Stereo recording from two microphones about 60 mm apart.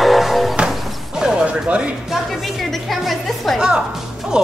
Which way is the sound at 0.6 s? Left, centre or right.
Centre.